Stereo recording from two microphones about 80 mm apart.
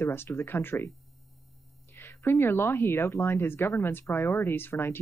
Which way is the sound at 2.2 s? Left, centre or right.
Left.